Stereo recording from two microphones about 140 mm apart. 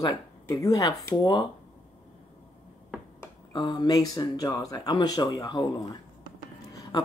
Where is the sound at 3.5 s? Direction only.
30° left (ahead or behind).